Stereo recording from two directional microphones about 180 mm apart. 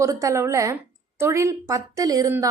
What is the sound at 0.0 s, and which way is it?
A woman's voice, 15° right (ahead or behind).